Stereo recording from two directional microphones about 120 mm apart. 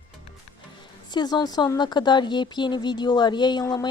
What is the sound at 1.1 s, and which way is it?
A woman's voice, 35° left (ahead or behind).